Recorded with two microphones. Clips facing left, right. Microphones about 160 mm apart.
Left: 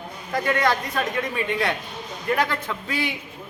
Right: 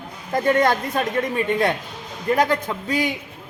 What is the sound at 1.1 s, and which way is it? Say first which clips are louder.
A man's voice: right 4 dB; 45° right (ahead or behind).